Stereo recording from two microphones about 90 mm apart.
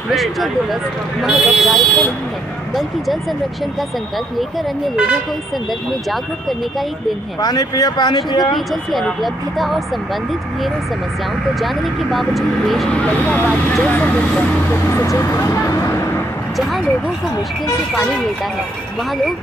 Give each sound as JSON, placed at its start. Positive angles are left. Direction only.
{"t": 0.1, "sound": "speech", "side_deg": 0}
{"t": 4.9, "sound": "speech", "side_deg": -10}
{"t": 7.3, "sound": "speech", "side_deg": 45}
{"t": 9.2, "sound": "speech", "side_deg": 0}
{"t": 11.6, "sound": "speech", "side_deg": 0}
{"t": 12.9, "sound": "speech", "side_deg": 15}
{"t": 14.7, "sound": "speech", "side_deg": 30}